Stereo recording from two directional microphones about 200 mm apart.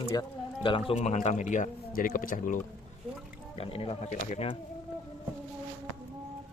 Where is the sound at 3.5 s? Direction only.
25° left (ahead or behind).